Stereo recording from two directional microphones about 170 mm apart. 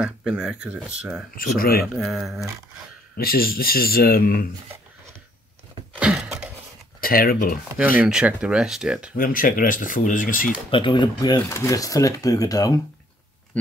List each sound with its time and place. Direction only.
0.0 s speech: 5° right (ahead or behind)
1.6 s speech: 60° left (ahead or behind)
2.0 s speech: centre (ahead or behind)
3.2 s speech: 60° left (ahead or behind)
5.9 s a sound: 5° right (ahead or behind)
7.0 s speech: 60° left (ahead or behind)
8.0 s speech: 5° right (ahead or behind)
9.1 s speech: 55° left (ahead or behind)
10.7 s speech: 30° left (ahead or behind)
11.3 s speech: 15° left (ahead or behind)